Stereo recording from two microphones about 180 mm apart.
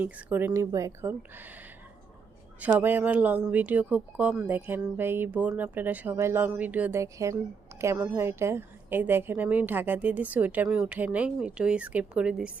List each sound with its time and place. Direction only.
0.0 s speech: 10° right (ahead or behind)
2.6 s speech: 10° right (ahead or behind)